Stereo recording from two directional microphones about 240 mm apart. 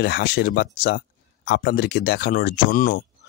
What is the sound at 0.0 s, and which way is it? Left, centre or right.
Speech, left.